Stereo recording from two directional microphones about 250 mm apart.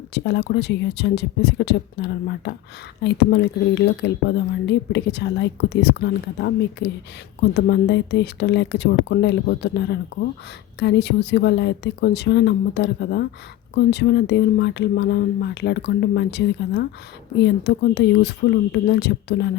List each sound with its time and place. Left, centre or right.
0.1 s speech: left